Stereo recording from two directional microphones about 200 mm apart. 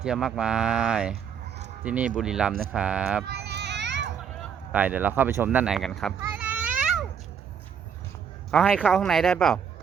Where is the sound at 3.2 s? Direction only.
55° right (ahead or behind).